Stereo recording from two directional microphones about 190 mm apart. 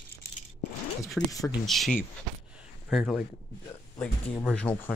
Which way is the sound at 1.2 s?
Centre (ahead or behind).